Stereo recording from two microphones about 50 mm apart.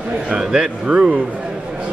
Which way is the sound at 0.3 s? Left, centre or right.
Centre.